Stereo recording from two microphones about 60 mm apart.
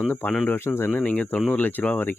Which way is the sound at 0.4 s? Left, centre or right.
Left.